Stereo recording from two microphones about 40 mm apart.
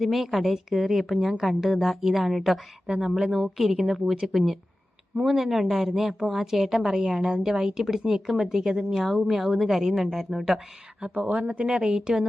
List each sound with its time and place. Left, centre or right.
0.0 s a woman's voice: centre
2.8 s a woman's voice: centre
11.2 s speech: right
11.6 s a woman's voice: centre